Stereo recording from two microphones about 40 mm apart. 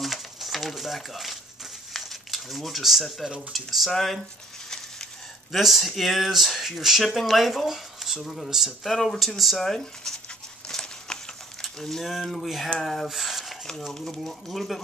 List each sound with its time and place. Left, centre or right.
0.0 s a sound: centre
2.0 s crumpling: centre
3.3 s speech: centre
5.5 s speech: centre
8.8 s speech: centre
10.7 s a sound: centre
11.6 s speech: centre
12.8 s a sound: centre
14.1 s speech: centre